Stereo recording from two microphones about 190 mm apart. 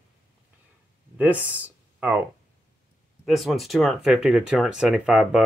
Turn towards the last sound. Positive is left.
turn(degrees=-5)  # may be behind; listen again after turning